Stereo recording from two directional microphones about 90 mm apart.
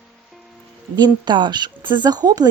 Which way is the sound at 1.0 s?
55° right (ahead or behind).